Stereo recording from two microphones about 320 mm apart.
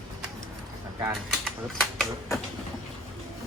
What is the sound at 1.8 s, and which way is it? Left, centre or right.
Speech, centre.